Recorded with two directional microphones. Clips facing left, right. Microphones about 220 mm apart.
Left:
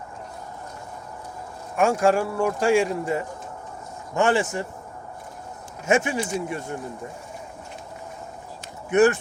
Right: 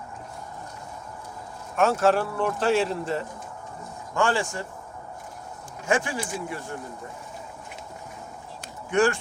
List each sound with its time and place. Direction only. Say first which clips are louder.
1.7 s speech: left 1 dB; 10° left (ahead or behind)
5.8 s speech: left 4 dB; 20° left (ahead or behind)
8.9 s speech: left 4 dB; 20° left (ahead or behind)